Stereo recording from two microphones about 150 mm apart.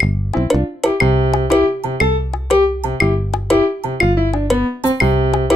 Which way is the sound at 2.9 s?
Centre (ahead or behind).